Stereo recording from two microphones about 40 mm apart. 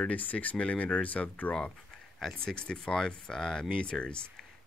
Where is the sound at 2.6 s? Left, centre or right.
Left.